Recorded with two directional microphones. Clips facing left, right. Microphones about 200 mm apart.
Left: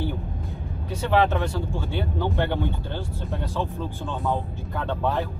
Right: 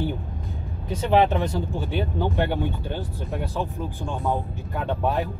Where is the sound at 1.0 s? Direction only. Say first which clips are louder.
Right 2 dB; 20° right (ahead or behind).